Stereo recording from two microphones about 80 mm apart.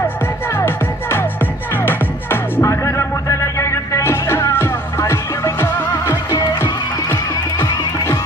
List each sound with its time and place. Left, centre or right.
1.7 s music: left
2.6 s music: left